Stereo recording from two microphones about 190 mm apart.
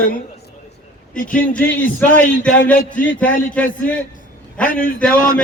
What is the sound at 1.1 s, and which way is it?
Speech, 45° left (ahead or behind).